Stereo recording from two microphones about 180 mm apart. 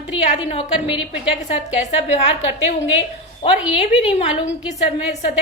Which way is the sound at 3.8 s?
30° left (ahead or behind).